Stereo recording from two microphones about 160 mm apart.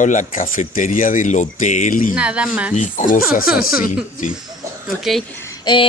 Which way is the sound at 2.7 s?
50° left (ahead or behind).